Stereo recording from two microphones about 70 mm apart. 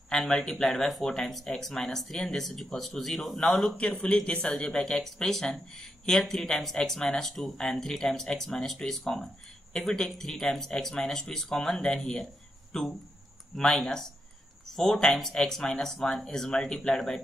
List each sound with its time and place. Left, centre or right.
0.1 s speech: centre
4.0 s speech: centre